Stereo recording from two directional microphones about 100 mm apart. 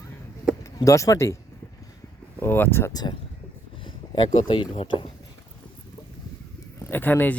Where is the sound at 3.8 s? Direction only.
55° left (ahead or behind).